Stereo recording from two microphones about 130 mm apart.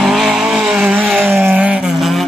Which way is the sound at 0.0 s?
5° right (ahead or behind).